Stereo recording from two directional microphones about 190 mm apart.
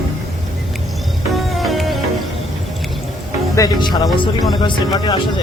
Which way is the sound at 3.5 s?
20° left (ahead or behind).